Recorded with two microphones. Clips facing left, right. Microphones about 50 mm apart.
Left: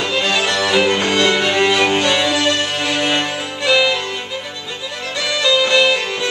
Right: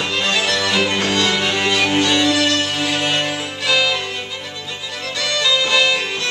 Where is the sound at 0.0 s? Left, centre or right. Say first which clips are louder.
Left 2 dB; centre.